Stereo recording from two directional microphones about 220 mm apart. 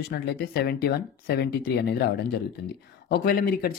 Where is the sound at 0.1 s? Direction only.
45° left (ahead or behind).